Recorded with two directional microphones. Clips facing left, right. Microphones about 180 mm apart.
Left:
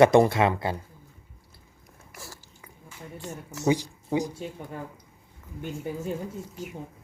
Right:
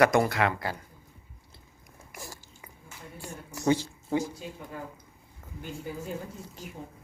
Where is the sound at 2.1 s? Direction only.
15° right (ahead or behind).